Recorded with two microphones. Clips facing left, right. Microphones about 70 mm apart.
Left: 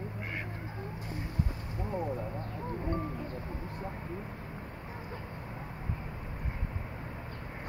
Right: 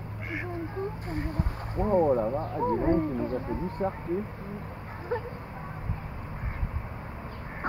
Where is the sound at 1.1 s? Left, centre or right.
Right.